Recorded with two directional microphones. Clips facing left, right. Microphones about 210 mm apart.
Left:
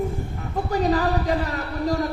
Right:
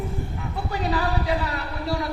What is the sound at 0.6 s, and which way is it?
Speech, 45° left (ahead or behind).